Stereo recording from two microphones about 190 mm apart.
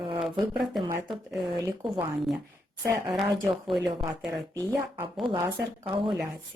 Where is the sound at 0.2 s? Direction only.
Centre (ahead or behind).